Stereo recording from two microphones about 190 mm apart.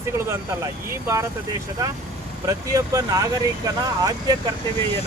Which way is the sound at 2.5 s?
20° right (ahead or behind).